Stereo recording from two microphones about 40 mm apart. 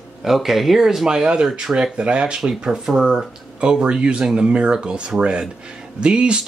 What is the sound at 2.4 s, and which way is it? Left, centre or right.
Speech, centre.